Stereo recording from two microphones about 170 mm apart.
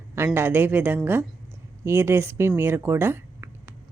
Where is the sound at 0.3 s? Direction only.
10° right (ahead or behind).